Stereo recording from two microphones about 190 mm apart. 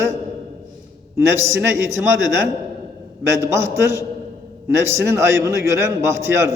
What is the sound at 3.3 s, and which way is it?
A man's voice, 15° right (ahead or behind).